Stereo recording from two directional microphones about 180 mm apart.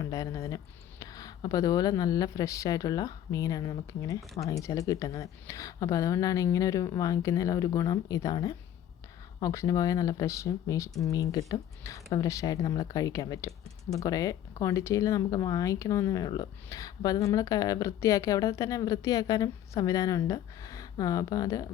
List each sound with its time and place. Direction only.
0.0 s speech: 20° left (ahead or behind)